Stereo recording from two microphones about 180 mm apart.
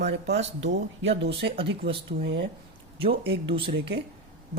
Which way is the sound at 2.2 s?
70° right (ahead or behind).